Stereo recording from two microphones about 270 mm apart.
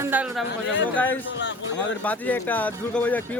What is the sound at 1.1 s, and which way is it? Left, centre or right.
Speech, left.